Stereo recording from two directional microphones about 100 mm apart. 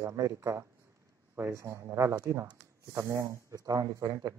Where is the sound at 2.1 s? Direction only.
40° right (ahead or behind).